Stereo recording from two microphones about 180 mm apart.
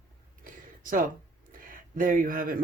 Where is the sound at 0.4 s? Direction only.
50° right (ahead or behind).